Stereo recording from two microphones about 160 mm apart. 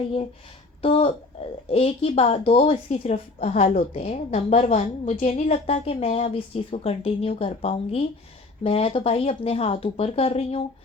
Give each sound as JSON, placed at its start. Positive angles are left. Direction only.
{"t": 0.8, "sound": "a woman's voice", "side_deg": 35}